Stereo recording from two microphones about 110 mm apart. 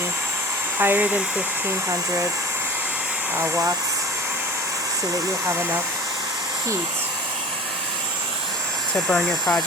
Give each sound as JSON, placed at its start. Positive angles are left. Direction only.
{"t": 0.8, "sound": "speech", "side_deg": -15}
{"t": 3.3, "sound": "speech", "side_deg": -20}
{"t": 9.0, "sound": "speech", "side_deg": 5}